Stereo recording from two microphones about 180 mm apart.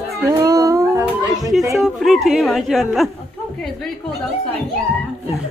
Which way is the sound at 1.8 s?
Centre (ahead or behind).